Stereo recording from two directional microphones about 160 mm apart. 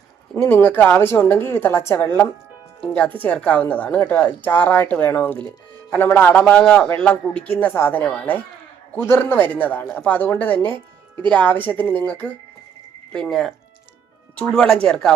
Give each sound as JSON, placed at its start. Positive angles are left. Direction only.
{"t": 0.3, "sound": "a woman's voice", "side_deg": 10}